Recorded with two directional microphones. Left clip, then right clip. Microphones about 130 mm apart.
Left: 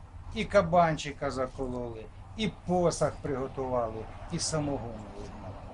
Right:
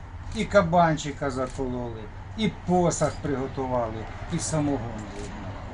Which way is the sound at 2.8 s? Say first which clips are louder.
Right 3 dB; 5° left (ahead or behind).